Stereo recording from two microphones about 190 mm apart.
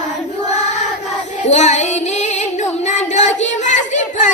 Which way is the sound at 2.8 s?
35° left (ahead or behind).